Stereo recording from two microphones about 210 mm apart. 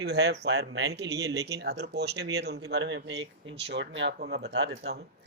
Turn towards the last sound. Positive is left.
turn(degrees=-50)  # may be behind; listen again after turning